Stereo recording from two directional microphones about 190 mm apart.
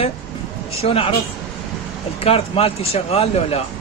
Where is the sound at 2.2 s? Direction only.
30° left (ahead or behind).